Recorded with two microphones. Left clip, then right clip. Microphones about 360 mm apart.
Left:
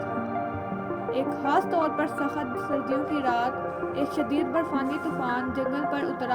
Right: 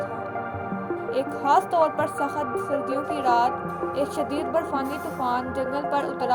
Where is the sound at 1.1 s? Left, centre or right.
Right.